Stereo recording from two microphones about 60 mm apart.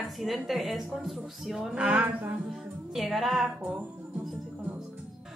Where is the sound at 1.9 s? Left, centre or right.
Right.